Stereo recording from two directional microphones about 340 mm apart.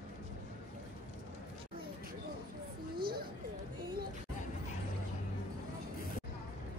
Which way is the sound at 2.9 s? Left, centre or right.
Right.